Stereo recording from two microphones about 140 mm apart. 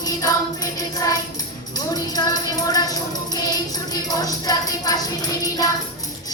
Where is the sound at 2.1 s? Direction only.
25° left (ahead or behind).